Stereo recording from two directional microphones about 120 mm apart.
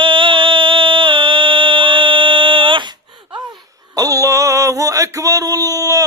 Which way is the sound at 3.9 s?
30° right (ahead or behind).